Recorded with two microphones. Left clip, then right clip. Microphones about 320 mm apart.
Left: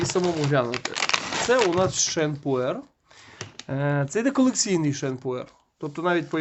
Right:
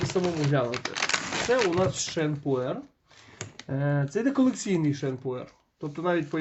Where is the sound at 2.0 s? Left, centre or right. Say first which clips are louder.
Left 3 dB; left.